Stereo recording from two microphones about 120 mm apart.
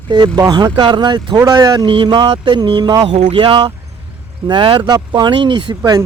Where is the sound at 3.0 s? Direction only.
60° right (ahead or behind); by 6.0 s 35° right (ahead or behind).